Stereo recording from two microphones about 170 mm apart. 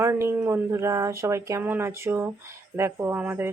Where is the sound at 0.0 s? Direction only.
15° right (ahead or behind).